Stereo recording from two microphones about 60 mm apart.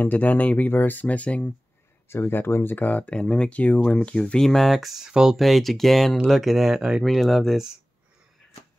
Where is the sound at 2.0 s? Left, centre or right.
Left; by 5.4 s centre.